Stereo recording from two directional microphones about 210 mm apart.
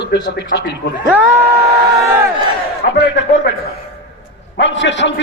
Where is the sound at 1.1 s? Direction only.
10° right (ahead or behind).